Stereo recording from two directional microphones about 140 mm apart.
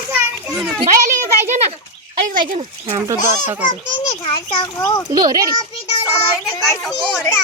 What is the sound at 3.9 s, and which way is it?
Speech, 35° left (ahead or behind).